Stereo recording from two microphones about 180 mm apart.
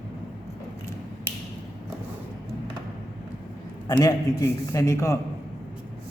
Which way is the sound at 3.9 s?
20° left (ahead or behind).